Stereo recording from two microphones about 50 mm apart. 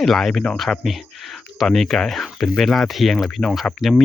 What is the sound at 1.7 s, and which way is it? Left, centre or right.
Speech, centre.